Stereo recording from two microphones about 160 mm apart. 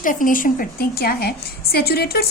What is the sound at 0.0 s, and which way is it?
A woman's voice, 55° left (ahead or behind).